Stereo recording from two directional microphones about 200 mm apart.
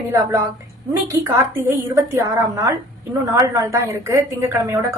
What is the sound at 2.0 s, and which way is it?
A woman's voice, 15° right (ahead or behind).